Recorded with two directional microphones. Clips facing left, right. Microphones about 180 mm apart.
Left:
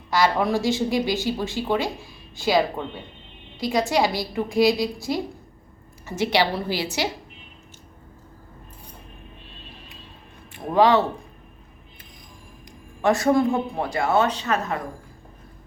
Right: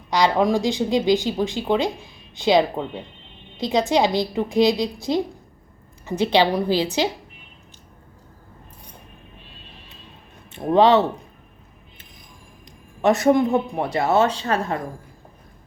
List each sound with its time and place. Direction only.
0.1 s a woman's voice: 20° right (ahead or behind)
10.5 s speech: 25° right (ahead or behind)
13.0 s speech: 20° right (ahead or behind)